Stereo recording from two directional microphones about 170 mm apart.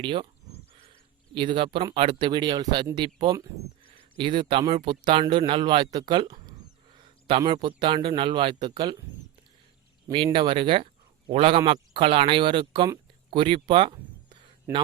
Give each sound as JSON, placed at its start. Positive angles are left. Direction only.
{"t": 0.0, "sound": "speech", "side_deg": -30}
{"t": 1.4, "sound": "speech", "side_deg": -30}
{"t": 10.3, "sound": "speech", "side_deg": -30}